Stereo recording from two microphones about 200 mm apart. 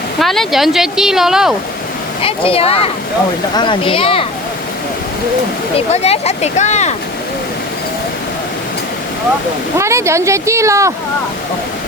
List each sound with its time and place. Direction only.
0.2 s speech: centre (ahead or behind)
2.2 s speech: 30° left (ahead or behind)
5.9 s speech: 30° left (ahead or behind)
9.7 s speech: 15° right (ahead or behind)